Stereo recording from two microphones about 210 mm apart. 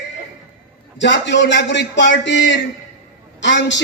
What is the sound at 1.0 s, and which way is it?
A man's voice, 55° left (ahead or behind).